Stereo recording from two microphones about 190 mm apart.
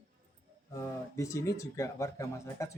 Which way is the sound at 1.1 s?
15° left (ahead or behind).